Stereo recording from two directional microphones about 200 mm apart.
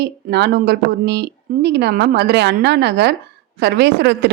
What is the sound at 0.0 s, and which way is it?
A woman's voice, 55° right (ahead or behind).